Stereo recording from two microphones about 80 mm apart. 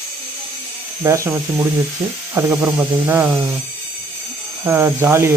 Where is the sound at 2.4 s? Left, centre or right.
Right.